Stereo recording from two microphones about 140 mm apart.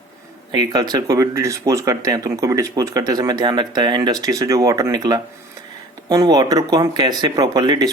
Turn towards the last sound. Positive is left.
turn(degrees=-30)  # may be behind; listen again after turning